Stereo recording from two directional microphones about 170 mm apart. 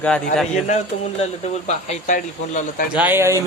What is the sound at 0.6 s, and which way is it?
A man's voice, 40° left (ahead or behind).